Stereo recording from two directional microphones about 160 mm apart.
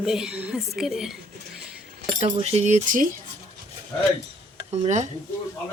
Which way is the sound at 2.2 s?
40° right (ahead or behind).